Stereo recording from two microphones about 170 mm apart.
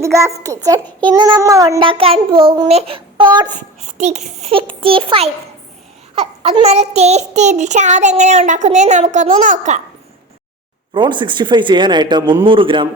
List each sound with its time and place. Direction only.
0.0 s a child's voice: 15° right (ahead or behind)
1.8 s a child's voice: 30° right (ahead or behind)
3.8 s a child's voice: 45° right (ahead or behind)
6.1 s child singing: 35° right (ahead or behind)
10.9 s a child's voice: 30° right (ahead or behind)